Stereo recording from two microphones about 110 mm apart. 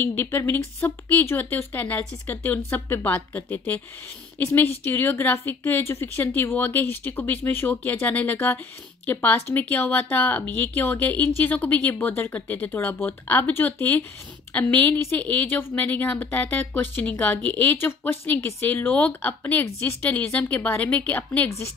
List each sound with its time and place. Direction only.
0.0 s a woman's voice: 20° left (ahead or behind)